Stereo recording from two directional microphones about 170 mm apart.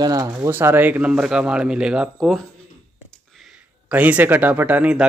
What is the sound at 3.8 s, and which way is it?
Speech, 10° right (ahead or behind).